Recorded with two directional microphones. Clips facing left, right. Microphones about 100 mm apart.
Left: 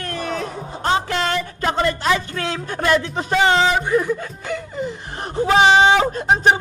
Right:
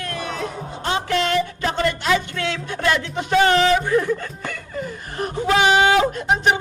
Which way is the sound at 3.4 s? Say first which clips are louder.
Left 2 dB; 15° left (ahead or behind).